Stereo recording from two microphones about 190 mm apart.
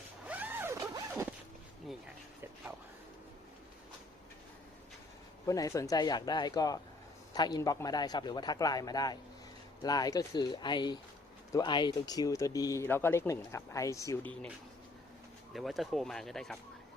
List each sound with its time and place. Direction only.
0.3 s zipper: 10° right (ahead or behind)
5.5 s a man's voice: 15° left (ahead or behind)
15.5 s speech: centre (ahead or behind)